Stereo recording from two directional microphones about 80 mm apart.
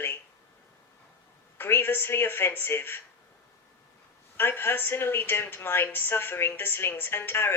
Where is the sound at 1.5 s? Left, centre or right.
Left.